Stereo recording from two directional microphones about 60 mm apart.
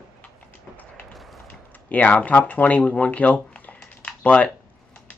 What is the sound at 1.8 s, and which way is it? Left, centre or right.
Speech, left.